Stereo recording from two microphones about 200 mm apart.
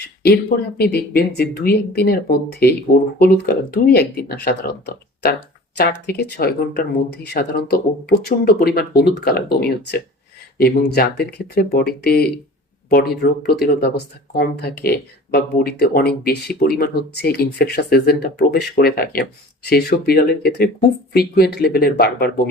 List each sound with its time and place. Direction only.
0.0 s a sound: 50° left (ahead or behind)
0.9 s speech: 50° left (ahead or behind)
5.7 s speech: 50° left (ahead or behind)